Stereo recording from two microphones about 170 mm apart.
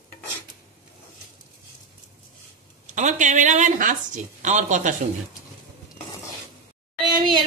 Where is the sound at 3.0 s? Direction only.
45° right (ahead or behind).